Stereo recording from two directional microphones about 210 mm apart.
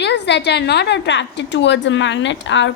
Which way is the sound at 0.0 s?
55° left (ahead or behind).